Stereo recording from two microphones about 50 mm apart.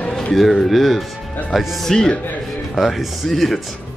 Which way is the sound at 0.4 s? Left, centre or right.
Centre.